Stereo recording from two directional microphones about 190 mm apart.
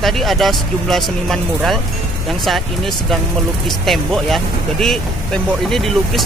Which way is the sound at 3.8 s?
Centre (ahead or behind).